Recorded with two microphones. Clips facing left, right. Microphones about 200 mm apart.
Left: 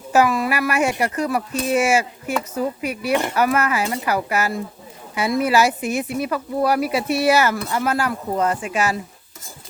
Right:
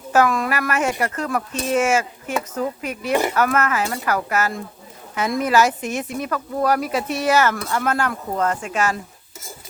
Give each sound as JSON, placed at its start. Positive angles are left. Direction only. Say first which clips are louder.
{"t": 0.1, "sound": "speech", "louder": "left 1 dB", "side_deg": 10}